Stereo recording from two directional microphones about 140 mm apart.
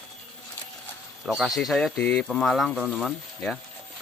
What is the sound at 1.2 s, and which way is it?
Speech, centre (ahead or behind).